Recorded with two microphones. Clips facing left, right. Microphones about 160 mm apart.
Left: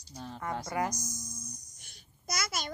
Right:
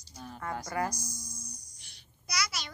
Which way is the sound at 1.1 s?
50° left (ahead or behind).